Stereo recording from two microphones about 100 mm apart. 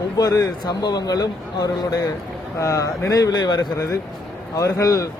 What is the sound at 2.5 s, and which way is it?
Speech, 30° left (ahead or behind).